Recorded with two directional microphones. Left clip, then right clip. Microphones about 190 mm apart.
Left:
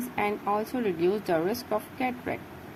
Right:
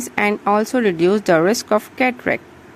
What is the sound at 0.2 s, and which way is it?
Speech, 35° right (ahead or behind).